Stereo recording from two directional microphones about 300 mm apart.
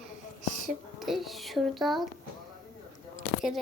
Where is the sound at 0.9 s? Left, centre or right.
Centre.